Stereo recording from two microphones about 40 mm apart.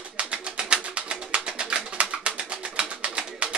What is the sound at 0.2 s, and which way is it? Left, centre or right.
Bird, right.